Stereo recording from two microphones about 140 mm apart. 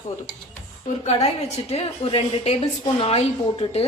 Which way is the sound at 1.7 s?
45° left (ahead or behind).